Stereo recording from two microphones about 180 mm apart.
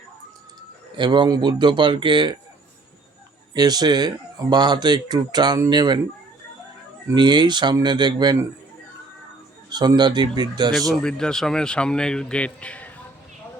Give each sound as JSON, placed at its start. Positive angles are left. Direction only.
{"t": 0.9, "sound": "speech", "side_deg": -25}
{"t": 3.5, "sound": "speech", "side_deg": -20}
{"t": 7.1, "sound": "speech", "side_deg": -25}
{"t": 9.6, "sound": "speech", "side_deg": -25}
{"t": 10.8, "sound": "speech", "side_deg": 0}